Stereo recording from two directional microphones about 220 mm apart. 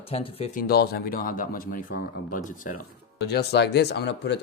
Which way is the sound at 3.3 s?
50° left (ahead or behind).